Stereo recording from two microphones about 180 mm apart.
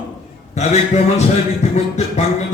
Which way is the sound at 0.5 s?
40° left (ahead or behind).